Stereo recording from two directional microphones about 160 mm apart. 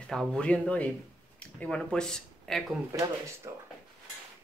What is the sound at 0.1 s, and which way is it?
Speech, 5° left (ahead or behind).